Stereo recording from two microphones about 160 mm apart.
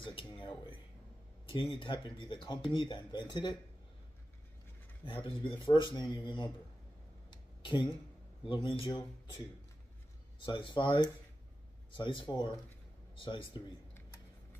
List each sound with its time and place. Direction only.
0.0 s a man's voice: 35° left (ahead or behind)
5.0 s a man's voice: 30° left (ahead or behind)
7.2 s a sound: 30° left (ahead or behind)
8.5 s a man's voice: 35° left (ahead or behind)
10.4 s a man's voice: 30° left (ahead or behind)